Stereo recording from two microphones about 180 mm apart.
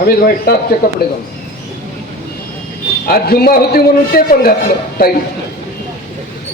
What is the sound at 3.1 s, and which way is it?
A man's voice, 60° left (ahead or behind).